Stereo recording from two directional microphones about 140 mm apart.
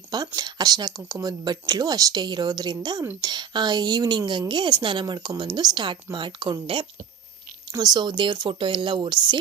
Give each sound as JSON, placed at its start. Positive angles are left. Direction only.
{"t": 0.3, "sound": "a woman's voice", "side_deg": -30}